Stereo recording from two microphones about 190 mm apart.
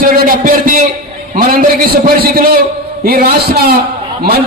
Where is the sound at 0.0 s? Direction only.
50° right (ahead or behind).